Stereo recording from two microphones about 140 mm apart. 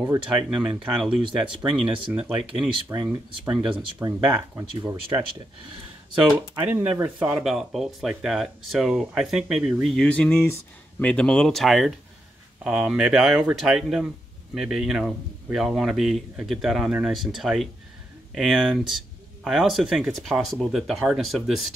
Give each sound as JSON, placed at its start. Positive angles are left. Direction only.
{"t": 0.0, "sound": "a man's voice", "side_deg": -10}
{"t": 2.9, "sound": "speech", "side_deg": -20}
{"t": 3.4, "sound": "speech", "side_deg": -30}
{"t": 4.6, "sound": "speech", "side_deg": -20}
{"t": 6.6, "sound": "speech", "side_deg": -10}
{"t": 7.3, "sound": "a man's voice", "side_deg": 0}
{"t": 10.0, "sound": "a man's voice", "side_deg": 10}